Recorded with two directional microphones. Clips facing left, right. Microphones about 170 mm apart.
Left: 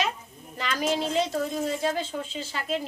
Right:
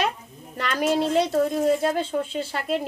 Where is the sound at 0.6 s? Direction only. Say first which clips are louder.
Right 4 dB; 60° right (ahead or behind).